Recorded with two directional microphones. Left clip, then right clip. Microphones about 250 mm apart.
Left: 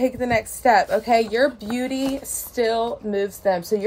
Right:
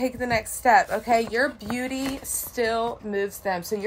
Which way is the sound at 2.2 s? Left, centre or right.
Centre.